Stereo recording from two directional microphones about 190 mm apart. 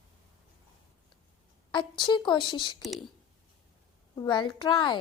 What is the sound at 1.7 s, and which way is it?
A woman's voice, 25° left (ahead or behind).